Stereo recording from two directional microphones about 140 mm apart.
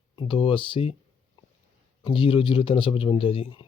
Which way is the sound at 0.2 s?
40° left (ahead or behind).